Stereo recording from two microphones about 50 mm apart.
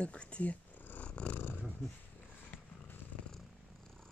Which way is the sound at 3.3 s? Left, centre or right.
Centre.